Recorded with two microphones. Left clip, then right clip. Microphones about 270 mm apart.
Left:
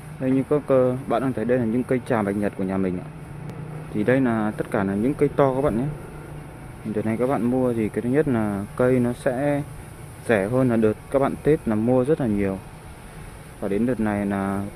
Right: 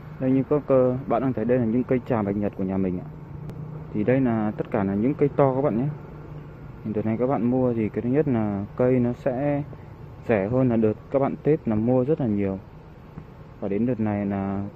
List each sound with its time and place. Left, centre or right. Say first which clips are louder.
0.2 s speech: left 1 dB; centre
7.0 s speech: left 1 dB; centre
13.6 s speech: left 2 dB; centre